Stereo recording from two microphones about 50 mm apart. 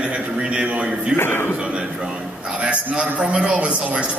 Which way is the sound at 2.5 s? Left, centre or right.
Right.